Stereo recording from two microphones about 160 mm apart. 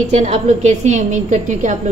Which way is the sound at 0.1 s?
45° right (ahead or behind).